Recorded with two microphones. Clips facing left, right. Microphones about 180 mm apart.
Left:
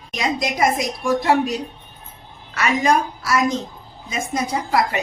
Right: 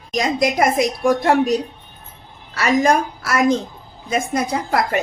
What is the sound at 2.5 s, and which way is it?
Speech, 40° right (ahead or behind).